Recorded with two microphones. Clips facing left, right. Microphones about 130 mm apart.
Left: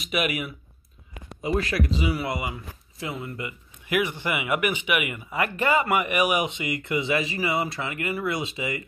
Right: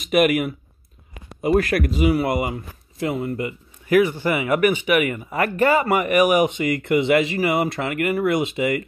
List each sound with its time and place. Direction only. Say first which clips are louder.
0.0 s speech: right 9 dB; 50° right (ahead or behind); by 7.3 s 65° right (ahead or behind)
7.3 s speech: right 6 dB; 50° right (ahead or behind)